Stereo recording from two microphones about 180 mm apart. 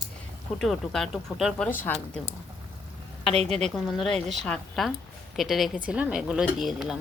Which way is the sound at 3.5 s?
Centre (ahead or behind).